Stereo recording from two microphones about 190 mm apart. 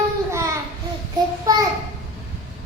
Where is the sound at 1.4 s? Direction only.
20° right (ahead or behind).